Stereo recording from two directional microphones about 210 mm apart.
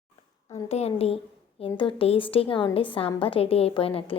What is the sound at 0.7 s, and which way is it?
A woman's voice, 30° left (ahead or behind).